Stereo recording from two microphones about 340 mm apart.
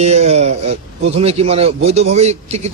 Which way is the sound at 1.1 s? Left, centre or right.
Centre.